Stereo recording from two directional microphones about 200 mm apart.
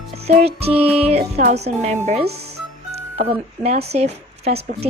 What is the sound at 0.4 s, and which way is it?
Speech, 30° right (ahead or behind).